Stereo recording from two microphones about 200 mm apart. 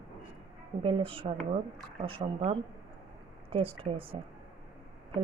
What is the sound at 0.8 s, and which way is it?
Speech, 25° right (ahead or behind).